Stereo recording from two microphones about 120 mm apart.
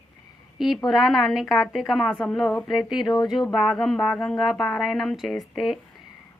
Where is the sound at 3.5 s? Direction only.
5° left (ahead or behind).